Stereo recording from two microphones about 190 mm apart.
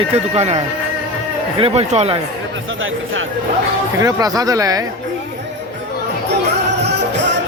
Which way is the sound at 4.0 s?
20° right (ahead or behind).